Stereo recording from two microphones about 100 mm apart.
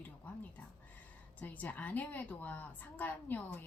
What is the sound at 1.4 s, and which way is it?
A woman's voice, 15° left (ahead or behind).